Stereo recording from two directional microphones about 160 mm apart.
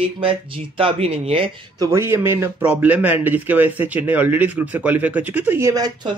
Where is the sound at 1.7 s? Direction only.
15° right (ahead or behind).